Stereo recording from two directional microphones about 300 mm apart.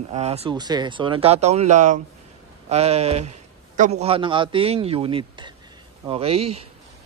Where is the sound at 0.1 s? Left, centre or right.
Right.